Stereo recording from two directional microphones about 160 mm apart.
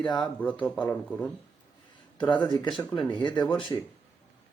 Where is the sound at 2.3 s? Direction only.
30° left (ahead or behind).